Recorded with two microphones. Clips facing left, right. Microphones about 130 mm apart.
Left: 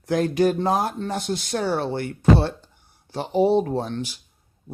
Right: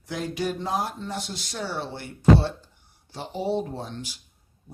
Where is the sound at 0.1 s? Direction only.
50° left (ahead or behind).